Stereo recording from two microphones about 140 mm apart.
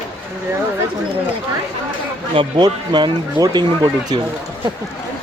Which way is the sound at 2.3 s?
35° right (ahead or behind).